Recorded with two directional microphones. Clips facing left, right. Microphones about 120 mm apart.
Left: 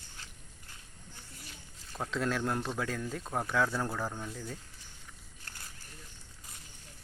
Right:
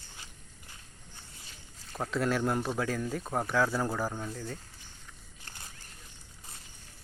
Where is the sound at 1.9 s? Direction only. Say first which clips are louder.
Right 3 dB; 5° right (ahead or behind).